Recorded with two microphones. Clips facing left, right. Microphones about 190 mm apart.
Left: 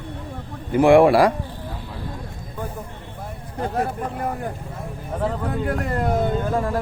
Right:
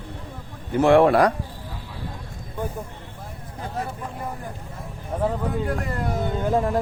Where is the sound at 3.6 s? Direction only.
65° left (ahead or behind).